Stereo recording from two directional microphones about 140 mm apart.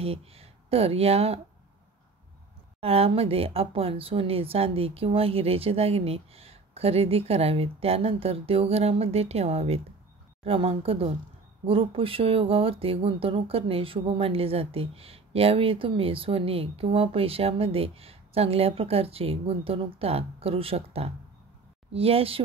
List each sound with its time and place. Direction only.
0.0 s speech: 45° right (ahead or behind)
2.8 s speech: 45° right (ahead or behind)